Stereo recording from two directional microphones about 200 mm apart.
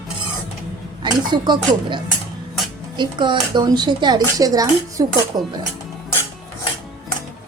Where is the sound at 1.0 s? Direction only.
20° right (ahead or behind).